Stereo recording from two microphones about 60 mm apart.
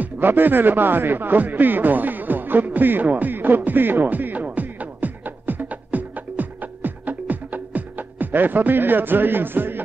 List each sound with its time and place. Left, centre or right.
0.0 s music: right